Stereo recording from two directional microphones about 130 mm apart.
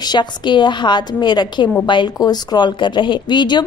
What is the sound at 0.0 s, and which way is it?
A woman's voice, 35° left (ahead or behind).